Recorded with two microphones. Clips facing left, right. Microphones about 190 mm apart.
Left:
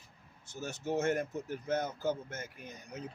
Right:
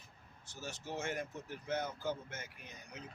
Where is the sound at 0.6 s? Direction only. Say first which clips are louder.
Left 9 dB; 45° left (ahead or behind).